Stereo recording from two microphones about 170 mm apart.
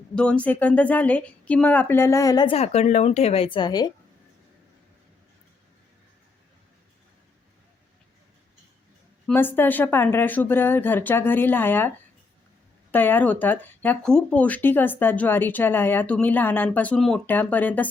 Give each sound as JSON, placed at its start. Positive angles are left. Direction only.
{"t": 0.2, "sound": "speech", "side_deg": 5}
{"t": 2.6, "sound": "a woman's voice", "side_deg": 40}
{"t": 9.2, "sound": "speech", "side_deg": 10}